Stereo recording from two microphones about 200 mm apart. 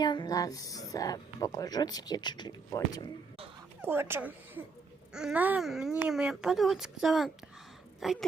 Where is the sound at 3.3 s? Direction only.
30° right (ahead or behind).